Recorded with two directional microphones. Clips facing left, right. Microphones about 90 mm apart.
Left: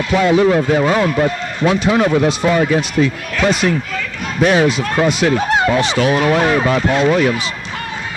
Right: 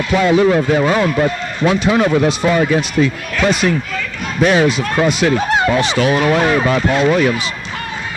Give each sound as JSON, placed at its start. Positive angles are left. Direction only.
{"t": 0.1, "sound": "a man's voice", "side_deg": 30}